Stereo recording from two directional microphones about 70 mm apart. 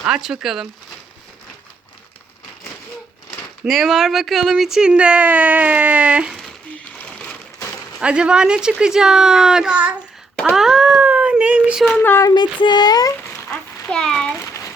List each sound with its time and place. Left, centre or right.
0.0 s speech: centre
3.7 s speech: centre
7.0 s a sound: left
7.9 s speech: centre
10.5 s a sound: centre
11.9 s speech: left
12.3 s speech: left
13.9 s a child's voice: centre
14.3 s a sound: left